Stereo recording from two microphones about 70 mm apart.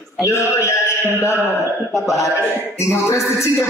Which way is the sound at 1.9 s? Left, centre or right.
Centre.